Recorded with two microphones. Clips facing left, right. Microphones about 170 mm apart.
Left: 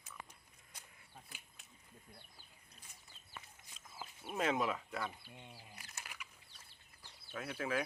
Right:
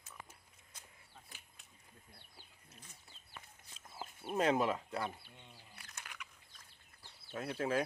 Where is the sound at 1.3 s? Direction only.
Centre (ahead or behind).